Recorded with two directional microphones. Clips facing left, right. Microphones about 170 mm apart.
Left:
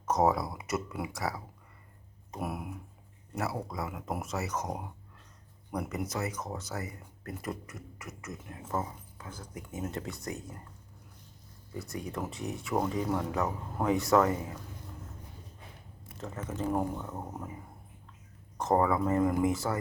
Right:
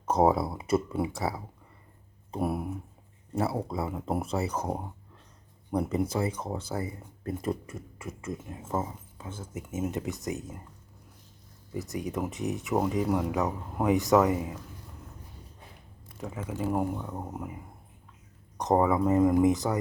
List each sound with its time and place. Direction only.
0.0 s speech: 30° right (ahead or behind)
11.7 s speech: 20° right (ahead or behind)
16.1 s speech: 10° right (ahead or behind)